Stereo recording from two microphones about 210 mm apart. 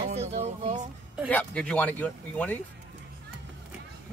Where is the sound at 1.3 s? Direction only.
5° left (ahead or behind).